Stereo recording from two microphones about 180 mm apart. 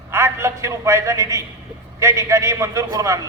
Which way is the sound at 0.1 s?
15° right (ahead or behind).